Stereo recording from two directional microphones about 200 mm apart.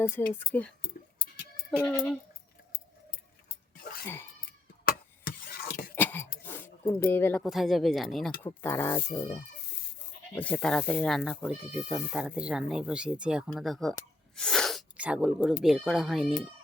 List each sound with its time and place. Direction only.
0.0 s speech: 10° left (ahead or behind)
1.7 s speech: 10° left (ahead or behind)
4.0 s cat: 10° left (ahead or behind)
4.9 s a sound: 45° left (ahead or behind)
5.9 s a sound: 10° left (ahead or behind)
7.4 s speech: centre (ahead or behind)
8.4 s speech: 10° left (ahead or behind)
10.3 s speech: 5° left (ahead or behind)